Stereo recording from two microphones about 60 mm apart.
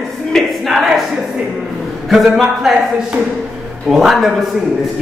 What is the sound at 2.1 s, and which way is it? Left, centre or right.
Speech, centre.